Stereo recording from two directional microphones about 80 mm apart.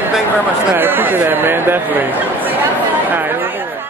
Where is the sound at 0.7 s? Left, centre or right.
Right.